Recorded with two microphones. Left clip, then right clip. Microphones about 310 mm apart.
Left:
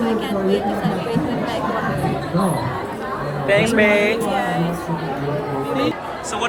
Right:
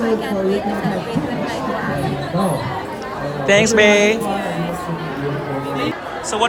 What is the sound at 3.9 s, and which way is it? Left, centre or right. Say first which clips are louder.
Speech: right 3 dB; right.